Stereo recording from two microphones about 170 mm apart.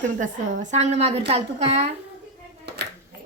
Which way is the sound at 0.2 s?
45° right (ahead or behind).